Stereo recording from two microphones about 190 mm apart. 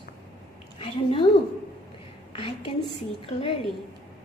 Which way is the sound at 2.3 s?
30° left (ahead or behind).